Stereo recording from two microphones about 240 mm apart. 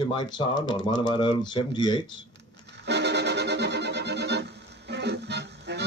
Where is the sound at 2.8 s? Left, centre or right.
Right.